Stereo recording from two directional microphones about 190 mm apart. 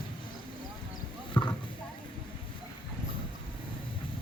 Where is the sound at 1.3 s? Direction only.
25° left (ahead or behind).